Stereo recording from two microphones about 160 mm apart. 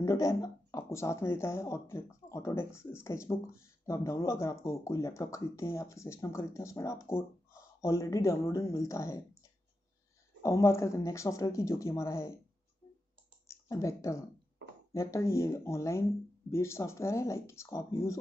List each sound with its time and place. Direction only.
0.0 s speech: 20° left (ahead or behind)
13.5 s speech: 20° left (ahead or behind)